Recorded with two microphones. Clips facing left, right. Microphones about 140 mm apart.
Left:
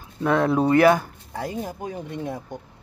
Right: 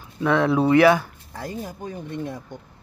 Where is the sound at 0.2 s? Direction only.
40° left (ahead or behind).